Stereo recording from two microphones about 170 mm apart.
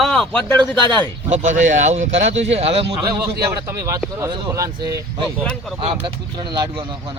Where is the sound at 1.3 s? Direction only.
45° right (ahead or behind).